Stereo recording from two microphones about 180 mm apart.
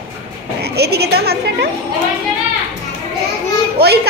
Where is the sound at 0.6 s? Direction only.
65° right (ahead or behind).